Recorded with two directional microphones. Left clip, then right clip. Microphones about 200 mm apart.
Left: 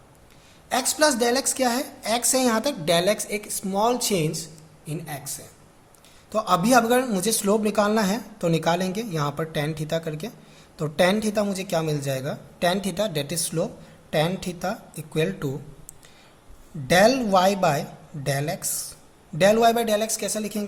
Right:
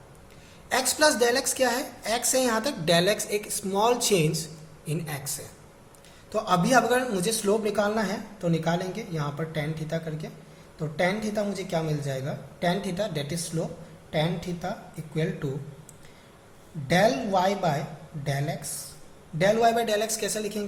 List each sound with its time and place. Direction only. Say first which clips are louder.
0.7 s a woman's voice: left 1 dB; 20° left (ahead or behind)
6.3 s a man's voice: left 3 dB; 30° left (ahead or behind)
16.8 s a man's voice: left 5 dB; 45° left (ahead or behind)